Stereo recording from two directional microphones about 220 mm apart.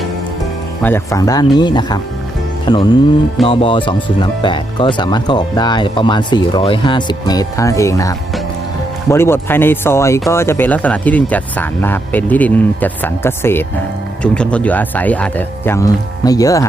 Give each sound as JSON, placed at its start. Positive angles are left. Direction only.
{"t": 0.8, "sound": "speech", "side_deg": 10}